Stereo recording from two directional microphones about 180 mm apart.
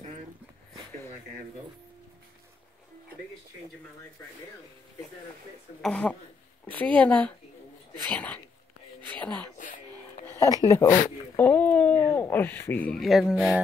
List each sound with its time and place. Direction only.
5.8 s speech: 5° left (ahead or behind)
9.6 s music: 45° left (ahead or behind)
10.2 s a sound: 15° left (ahead or behind)
11.3 s speech: 10° left (ahead or behind)